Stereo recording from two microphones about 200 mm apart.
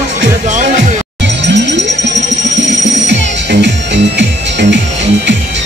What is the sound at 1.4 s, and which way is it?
Music, 60° right (ahead or behind).